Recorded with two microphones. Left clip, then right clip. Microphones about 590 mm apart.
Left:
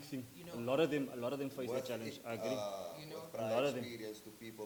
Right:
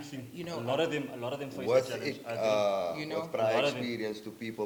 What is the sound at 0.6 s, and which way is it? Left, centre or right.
A woman's voice, left.